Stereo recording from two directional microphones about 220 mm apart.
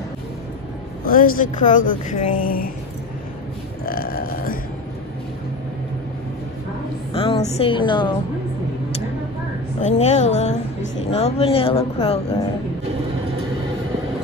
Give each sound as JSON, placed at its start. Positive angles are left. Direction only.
{"t": 1.0, "sound": "speech", "side_deg": 40}
{"t": 3.8, "sound": "burping", "side_deg": 40}
{"t": 7.2, "sound": "speech", "side_deg": 25}
{"t": 9.8, "sound": "speech", "side_deg": 30}